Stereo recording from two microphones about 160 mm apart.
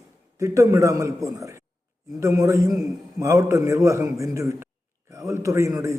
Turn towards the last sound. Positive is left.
turn(degrees=-20)  # may be behind; listen again after turning